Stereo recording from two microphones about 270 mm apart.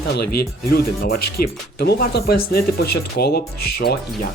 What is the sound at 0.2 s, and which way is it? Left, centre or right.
Speech, left.